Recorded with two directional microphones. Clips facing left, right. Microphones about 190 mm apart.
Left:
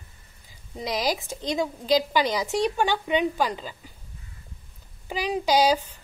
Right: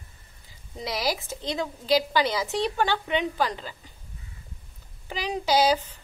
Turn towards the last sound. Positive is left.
turn(degrees=15)  # may be behind; listen again after turning